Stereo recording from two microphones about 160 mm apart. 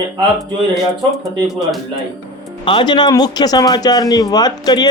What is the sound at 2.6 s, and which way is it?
Speech, 30° left (ahead or behind).